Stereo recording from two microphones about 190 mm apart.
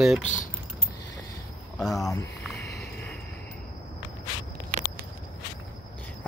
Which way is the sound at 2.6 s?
60° left (ahead or behind).